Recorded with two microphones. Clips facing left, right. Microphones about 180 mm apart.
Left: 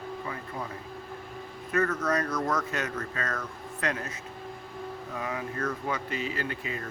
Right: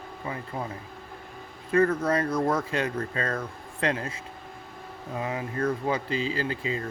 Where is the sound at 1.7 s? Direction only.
30° right (ahead or behind).